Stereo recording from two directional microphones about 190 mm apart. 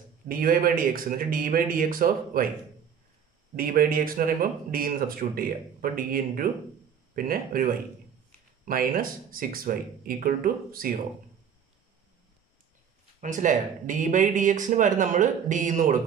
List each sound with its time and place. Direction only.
0.3 s speech: 50° right (ahead or behind)
3.5 s speech: 50° right (ahead or behind)
13.2 s speech: 40° right (ahead or behind)